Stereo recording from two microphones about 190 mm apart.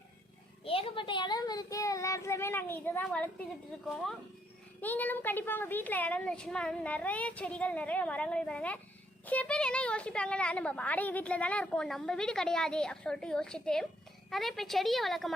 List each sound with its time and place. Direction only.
0.6 s a woman's voice: 30° left (ahead or behind); by 15.3 s centre (ahead or behind)